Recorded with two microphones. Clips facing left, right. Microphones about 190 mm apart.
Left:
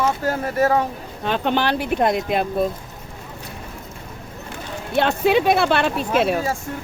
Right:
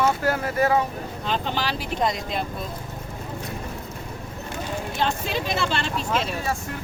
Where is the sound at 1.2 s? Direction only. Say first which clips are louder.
Left 7 dB; 60° left (ahead or behind).